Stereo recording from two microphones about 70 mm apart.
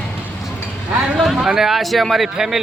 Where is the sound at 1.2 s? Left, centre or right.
Centre.